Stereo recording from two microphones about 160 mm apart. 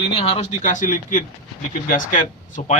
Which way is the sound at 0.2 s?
40° left (ahead or behind).